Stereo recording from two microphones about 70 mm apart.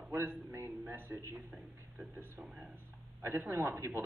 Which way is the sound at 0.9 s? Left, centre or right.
Right.